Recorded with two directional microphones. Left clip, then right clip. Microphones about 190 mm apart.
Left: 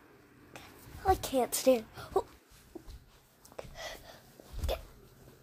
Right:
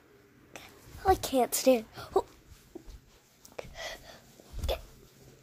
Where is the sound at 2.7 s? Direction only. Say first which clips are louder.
Right 1 dB; 10° right (ahead or behind).